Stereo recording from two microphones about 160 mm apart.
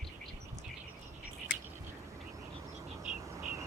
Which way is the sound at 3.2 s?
20° right (ahead or behind).